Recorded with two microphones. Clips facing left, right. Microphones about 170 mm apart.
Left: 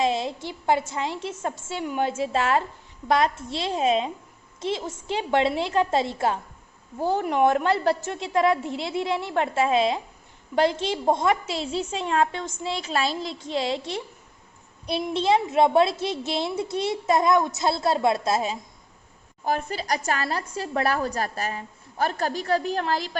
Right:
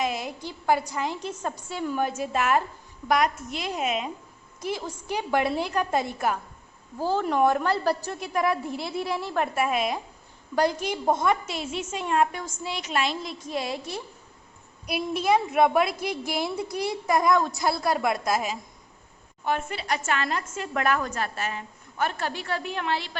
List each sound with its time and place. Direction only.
0.0 s a woman's voice: 25° left (ahead or behind)
15.1 s a woman's voice: 25° left (ahead or behind)
19.5 s a woman's voice: 35° left (ahead or behind)